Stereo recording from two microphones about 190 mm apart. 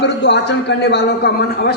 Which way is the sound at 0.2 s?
65° left (ahead or behind).